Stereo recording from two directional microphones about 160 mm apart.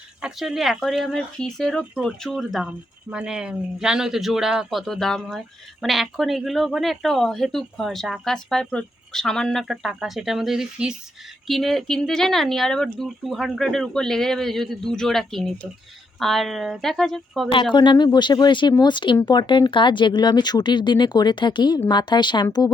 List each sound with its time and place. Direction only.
0.2 s speech: 5° right (ahead or behind)
17.5 s speech: 30° left (ahead or behind)